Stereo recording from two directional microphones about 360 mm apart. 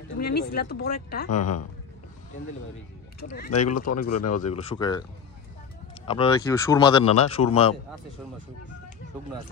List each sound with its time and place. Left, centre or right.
0.2 s speech: left
1.3 s speech: left
3.3 s speech: left
3.5 s speech: left
4.5 s speech: centre
6.0 s speech: centre